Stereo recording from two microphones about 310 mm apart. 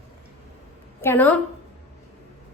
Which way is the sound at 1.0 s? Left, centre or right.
Centre.